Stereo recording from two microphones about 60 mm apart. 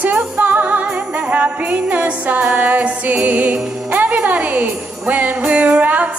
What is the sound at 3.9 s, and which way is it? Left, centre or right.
Speech, right.